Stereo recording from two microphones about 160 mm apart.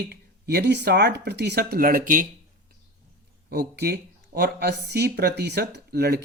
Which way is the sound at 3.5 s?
75° right (ahead or behind).